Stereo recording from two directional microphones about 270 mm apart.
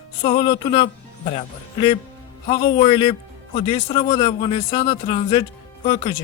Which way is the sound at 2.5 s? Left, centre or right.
Centre.